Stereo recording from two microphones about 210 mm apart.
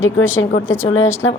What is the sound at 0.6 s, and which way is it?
Speech, 10° left (ahead or behind).